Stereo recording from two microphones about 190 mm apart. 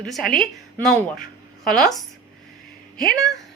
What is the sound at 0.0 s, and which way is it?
A woman's voice, centre (ahead or behind).